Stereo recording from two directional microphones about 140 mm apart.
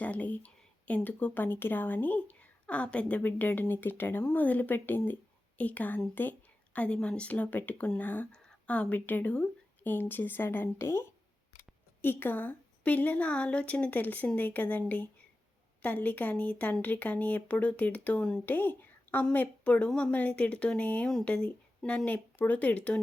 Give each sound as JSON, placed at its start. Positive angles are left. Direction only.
{"t": 0.0, "sound": "speech", "side_deg": 10}